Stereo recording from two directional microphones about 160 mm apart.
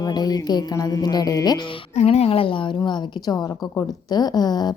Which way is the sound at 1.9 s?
40° left (ahead or behind).